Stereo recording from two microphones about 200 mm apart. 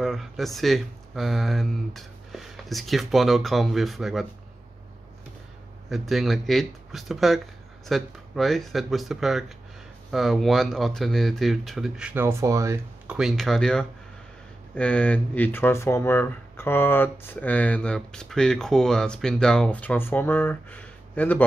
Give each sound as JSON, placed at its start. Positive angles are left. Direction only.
{"t": 0.0, "sound": "speech", "side_deg": 0}
{"t": 5.9, "sound": "speech", "side_deg": 0}